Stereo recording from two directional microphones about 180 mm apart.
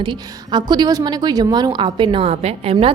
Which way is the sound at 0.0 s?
25° right (ahead or behind).